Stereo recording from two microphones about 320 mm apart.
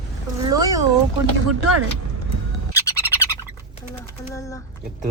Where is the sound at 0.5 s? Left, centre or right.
Centre.